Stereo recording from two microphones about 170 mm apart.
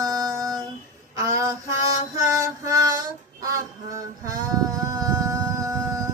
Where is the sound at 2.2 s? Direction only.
20° right (ahead or behind).